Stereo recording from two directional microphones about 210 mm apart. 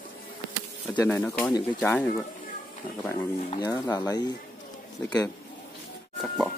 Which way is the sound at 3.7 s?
20° left (ahead or behind).